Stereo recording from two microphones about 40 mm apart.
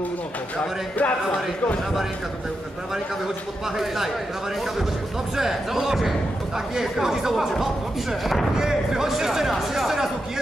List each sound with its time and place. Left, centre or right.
0.6 s speech: left
3.7 s speech: centre
5.3 s speech: centre
8.5 s speech: centre